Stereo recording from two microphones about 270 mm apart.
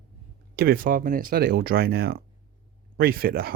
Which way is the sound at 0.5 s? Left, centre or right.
Right.